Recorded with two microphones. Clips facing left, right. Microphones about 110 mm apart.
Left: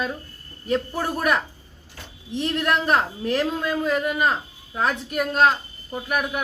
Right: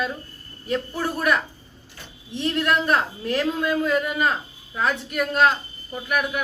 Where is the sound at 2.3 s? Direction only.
35° left (ahead or behind).